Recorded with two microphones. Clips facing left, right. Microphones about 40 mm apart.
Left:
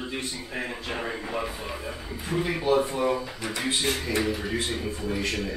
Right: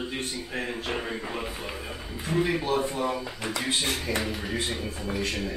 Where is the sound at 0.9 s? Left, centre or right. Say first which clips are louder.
Even; centre.